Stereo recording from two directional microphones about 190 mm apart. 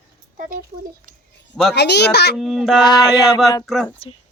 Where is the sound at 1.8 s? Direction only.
60° left (ahead or behind).